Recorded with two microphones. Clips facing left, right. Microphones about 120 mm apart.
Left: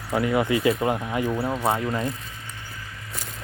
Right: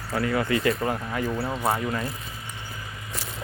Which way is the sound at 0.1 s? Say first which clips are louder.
Left 3 dB; 20° left (ahead or behind).